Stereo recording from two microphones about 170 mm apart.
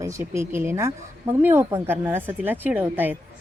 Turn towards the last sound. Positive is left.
turn(degrees=-10)  # may be behind; listen again after turning